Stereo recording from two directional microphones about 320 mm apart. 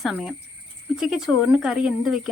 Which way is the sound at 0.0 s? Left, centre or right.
Centre.